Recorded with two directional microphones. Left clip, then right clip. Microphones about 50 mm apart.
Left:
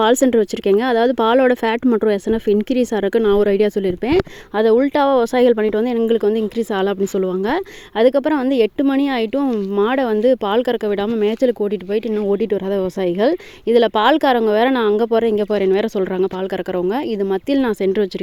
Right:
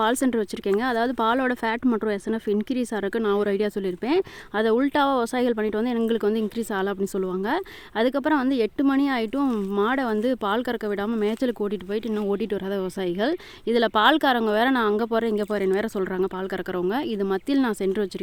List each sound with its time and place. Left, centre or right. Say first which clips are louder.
0.0 s speech: left 9 dB; left
3.2 s speech: left 9 dB; centre
6.6 s speech: left 8 dB; left
8.4 s speech: left 8 dB; left
8.8 s speech: left 5 dB; centre
12.7 s speech: left 8 dB; left
13.7 s speech: left 5 dB; centre
14.9 s speech: left 8 dB; centre
17.3 s speech: left 6 dB; centre